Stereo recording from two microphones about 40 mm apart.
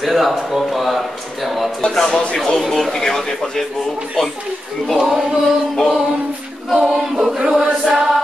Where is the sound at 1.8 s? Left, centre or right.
Centre.